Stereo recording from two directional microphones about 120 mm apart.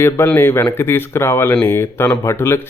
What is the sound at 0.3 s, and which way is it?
Speech, 20° left (ahead or behind).